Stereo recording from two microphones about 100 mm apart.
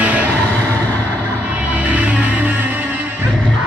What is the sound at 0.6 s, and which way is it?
Music, 15° left (ahead or behind).